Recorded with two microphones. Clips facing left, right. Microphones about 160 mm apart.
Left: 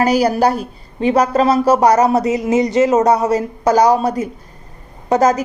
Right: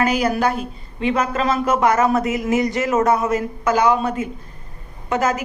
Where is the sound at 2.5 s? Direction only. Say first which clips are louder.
Left 7 dB; 20° left (ahead or behind).